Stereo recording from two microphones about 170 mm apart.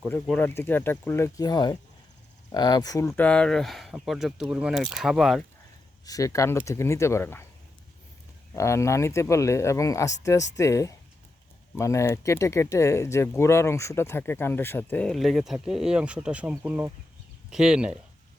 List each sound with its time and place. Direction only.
0.0 s speech: 5° left (ahead or behind)
3.1 s speech: 5° left (ahead or behind)
6.1 s speech: 20° left (ahead or behind)
8.5 s speech: 15° left (ahead or behind); by 17.9 s 5° right (ahead or behind)